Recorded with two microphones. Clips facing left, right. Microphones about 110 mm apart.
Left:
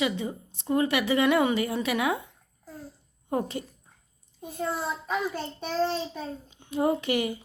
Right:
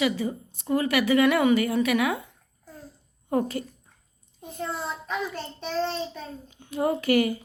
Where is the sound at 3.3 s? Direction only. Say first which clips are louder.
Right 3 dB; 20° left (ahead or behind).